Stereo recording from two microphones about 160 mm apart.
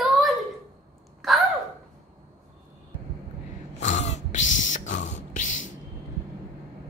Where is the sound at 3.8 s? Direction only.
45° left (ahead or behind).